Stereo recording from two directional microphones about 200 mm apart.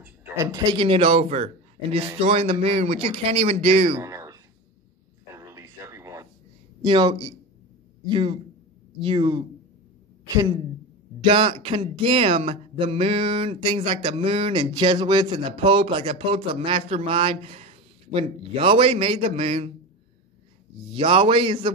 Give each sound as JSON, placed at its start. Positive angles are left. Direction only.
{"t": 0.0, "sound": "a man's voice", "side_deg": -10}
{"t": 4.0, "sound": "a sound", "side_deg": -15}
{"t": 6.8, "sound": "a woman's voice", "side_deg": -20}
{"t": 11.1, "sound": "speech", "side_deg": -25}
{"t": 20.9, "sound": "speech", "side_deg": -25}